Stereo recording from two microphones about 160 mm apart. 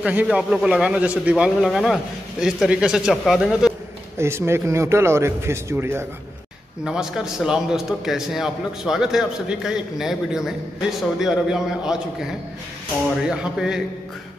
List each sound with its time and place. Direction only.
0.0 s a man's voice: 10° right (ahead or behind)
4.2 s speech: 15° right (ahead or behind)
6.8 s a man's voice: 5° right (ahead or behind)
13.3 s a man's voice: 5° right (ahead or behind)